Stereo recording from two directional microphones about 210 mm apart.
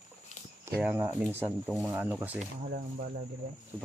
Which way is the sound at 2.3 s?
40° right (ahead or behind).